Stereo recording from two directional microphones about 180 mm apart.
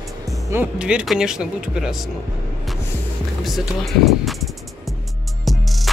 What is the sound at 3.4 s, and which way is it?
Speech, centre (ahead or behind).